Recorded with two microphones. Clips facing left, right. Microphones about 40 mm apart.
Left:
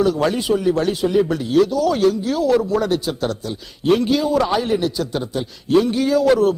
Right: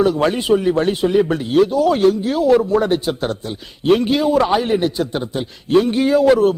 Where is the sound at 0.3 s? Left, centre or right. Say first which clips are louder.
Right 2 dB; right.